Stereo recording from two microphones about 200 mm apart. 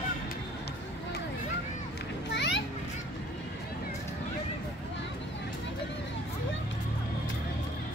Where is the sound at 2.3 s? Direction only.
60° left (ahead or behind).